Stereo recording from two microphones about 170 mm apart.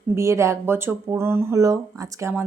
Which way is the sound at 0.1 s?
15° right (ahead or behind).